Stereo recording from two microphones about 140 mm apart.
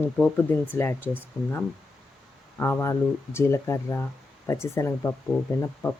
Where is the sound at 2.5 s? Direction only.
15° left (ahead or behind).